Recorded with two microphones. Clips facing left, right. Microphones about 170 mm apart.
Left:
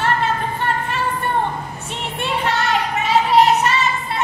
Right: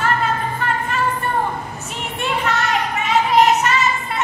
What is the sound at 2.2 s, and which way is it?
Child singing, 30° left (ahead or behind).